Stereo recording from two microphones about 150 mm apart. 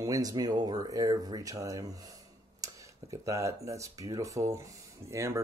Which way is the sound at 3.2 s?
20° right (ahead or behind).